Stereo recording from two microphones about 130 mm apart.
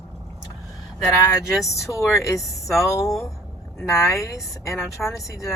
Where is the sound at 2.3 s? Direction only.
Centre (ahead or behind).